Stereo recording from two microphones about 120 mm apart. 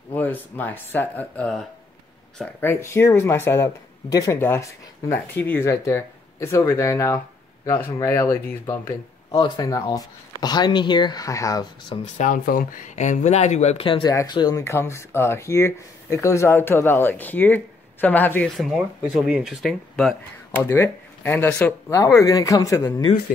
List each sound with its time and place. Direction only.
0.1 s speech: 15° left (ahead or behind)
2.6 s speech: 20° left (ahead or behind)
12.0 s speech: 90° left; by 13.8 s 65° left (ahead or behind)
14.0 s speech: 35° left (ahead or behind)
14.6 s speech: 25° left (ahead or behind)
18.6 s speech: centre (ahead or behind)
20.6 s speech: 15° left (ahead or behind)